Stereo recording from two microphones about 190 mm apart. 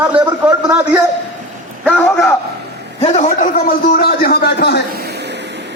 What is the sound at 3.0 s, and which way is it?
A man's voice, 40° left (ahead or behind).